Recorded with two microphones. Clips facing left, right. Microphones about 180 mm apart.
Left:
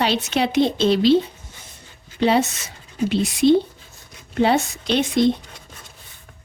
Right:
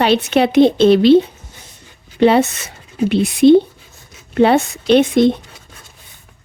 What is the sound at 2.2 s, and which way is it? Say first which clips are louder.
A woman's voice: right 6 dB; 60° right (ahead or behind).